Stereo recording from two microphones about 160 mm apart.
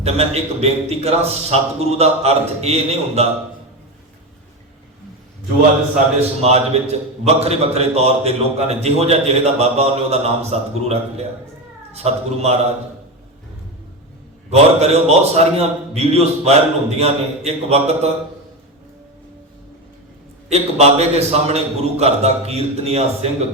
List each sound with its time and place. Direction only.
0.0 s a man's voice: 40° right (ahead or behind)
6.1 s a man's voice: 40° right (ahead or behind)
14.5 s a man's voice: 40° right (ahead or behind)
20.5 s a man's voice: 40° right (ahead or behind)